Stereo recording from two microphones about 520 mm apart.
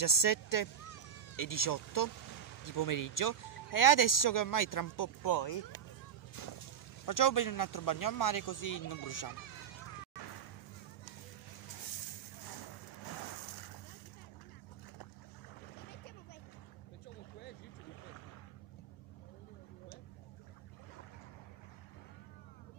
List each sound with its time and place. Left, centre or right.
0.0 s speech: left
7.1 s speech: left